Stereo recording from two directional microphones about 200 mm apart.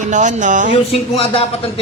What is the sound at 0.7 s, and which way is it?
Speech, 30° left (ahead or behind).